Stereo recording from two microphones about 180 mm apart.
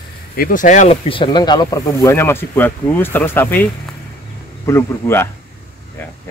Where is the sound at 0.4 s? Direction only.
50° left (ahead or behind).